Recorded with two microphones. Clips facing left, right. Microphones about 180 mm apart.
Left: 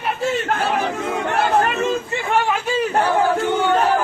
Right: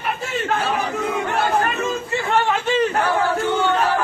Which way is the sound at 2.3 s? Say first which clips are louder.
Even; 10° left (ahead or behind).